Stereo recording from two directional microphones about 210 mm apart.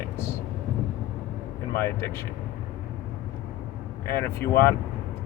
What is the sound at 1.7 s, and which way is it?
Speech, 10° left (ahead or behind).